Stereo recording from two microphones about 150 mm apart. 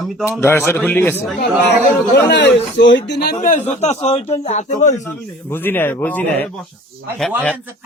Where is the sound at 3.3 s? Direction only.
65° left (ahead or behind).